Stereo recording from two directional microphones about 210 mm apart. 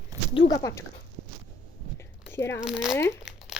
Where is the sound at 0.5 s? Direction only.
15° left (ahead or behind).